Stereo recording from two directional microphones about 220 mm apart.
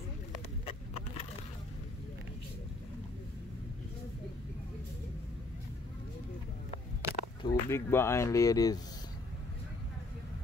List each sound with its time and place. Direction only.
0.7 s vehicle: 25° left (ahead or behind)
7.0 s a sound: 10° right (ahead or behind)
7.4 s speech: 10° left (ahead or behind)